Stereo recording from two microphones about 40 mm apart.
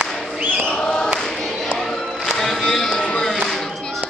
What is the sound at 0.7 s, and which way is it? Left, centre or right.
Choir, left.